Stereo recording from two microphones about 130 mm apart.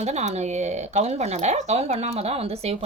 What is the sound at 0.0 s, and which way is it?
A woman's voice, 60° right (ahead or behind).